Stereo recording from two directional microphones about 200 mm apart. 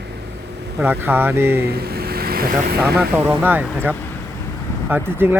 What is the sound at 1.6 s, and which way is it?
Speech, 50° right (ahead or behind).